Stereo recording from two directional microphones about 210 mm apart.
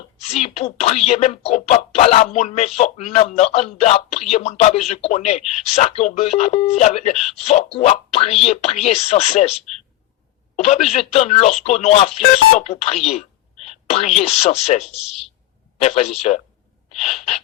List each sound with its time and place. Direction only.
0.2 s speech: 30° left (ahead or behind)